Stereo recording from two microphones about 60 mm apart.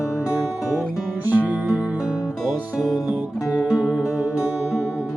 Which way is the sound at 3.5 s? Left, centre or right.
Centre.